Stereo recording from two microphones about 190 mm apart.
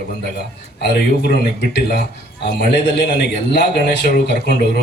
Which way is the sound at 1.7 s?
60° left (ahead or behind).